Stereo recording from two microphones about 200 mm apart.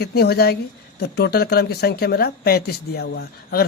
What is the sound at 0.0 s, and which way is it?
Speech, 55° left (ahead or behind).